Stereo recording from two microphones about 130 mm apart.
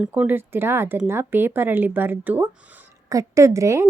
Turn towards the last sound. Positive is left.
turn(degrees=-20)  # may be behind; listen again after turning